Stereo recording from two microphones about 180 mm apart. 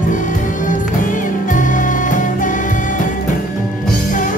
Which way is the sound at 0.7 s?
45° left (ahead or behind).